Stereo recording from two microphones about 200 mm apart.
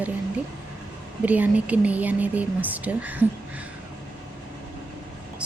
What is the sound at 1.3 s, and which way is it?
Speech, 5° right (ahead or behind).